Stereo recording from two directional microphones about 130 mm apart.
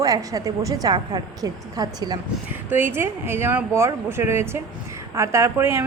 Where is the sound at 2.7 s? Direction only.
15° right (ahead or behind).